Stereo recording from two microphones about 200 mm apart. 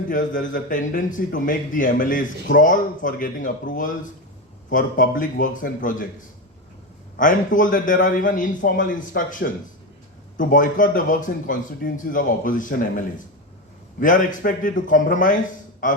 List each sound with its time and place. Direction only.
0.1 s a man's voice: 40° left (ahead or behind)
7.2 s a man's voice: 40° left (ahead or behind)